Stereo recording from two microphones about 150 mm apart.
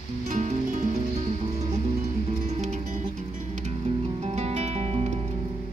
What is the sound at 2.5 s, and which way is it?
Music, 50° right (ahead or behind).